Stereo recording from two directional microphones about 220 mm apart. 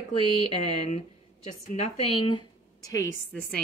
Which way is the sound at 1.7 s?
30° left (ahead or behind).